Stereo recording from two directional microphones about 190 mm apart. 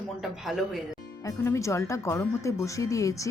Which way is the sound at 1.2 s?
15° left (ahead or behind).